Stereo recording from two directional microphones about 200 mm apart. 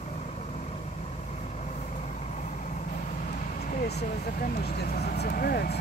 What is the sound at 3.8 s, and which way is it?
Vehicle, 55° left (ahead or behind).